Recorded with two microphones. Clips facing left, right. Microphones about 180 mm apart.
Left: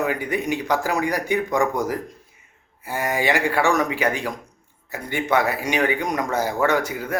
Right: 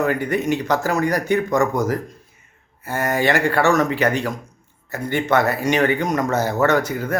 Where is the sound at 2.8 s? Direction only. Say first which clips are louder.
Right 3 dB; 15° left (ahead or behind).